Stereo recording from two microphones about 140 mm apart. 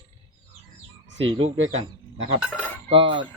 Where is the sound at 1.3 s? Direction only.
40° right (ahead or behind).